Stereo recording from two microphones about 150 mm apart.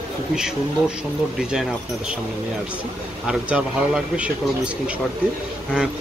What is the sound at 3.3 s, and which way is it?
A man's voice, 5° right (ahead or behind).